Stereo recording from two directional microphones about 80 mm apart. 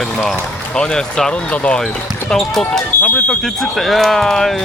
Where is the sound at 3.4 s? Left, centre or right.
Centre.